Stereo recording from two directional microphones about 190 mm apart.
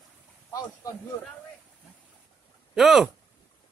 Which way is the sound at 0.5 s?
15° left (ahead or behind).